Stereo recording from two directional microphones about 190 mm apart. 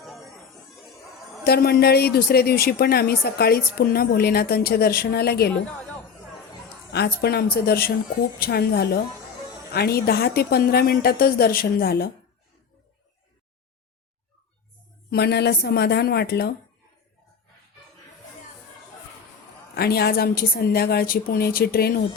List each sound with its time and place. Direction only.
0.0 s chatter: centre (ahead or behind)
1.5 s speech: 55° left (ahead or behind)
6.9 s speech: 55° left (ahead or behind)
15.1 s speech: 60° left (ahead or behind)
19.7 s speech: 55° left (ahead or behind)